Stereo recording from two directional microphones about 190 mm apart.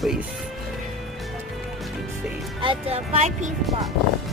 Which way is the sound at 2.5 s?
30° right (ahead or behind).